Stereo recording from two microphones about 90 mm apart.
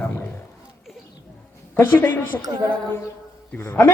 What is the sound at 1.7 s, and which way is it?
Speech, 20° left (ahead or behind).